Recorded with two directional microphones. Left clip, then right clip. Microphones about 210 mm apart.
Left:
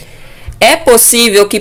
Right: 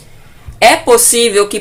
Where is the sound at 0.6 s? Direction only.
40° left (ahead or behind).